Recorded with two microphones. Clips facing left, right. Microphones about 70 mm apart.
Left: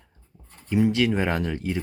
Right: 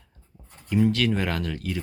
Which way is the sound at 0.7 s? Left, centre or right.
Centre.